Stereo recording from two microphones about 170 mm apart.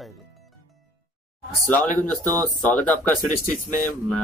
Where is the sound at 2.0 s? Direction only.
10° left (ahead or behind).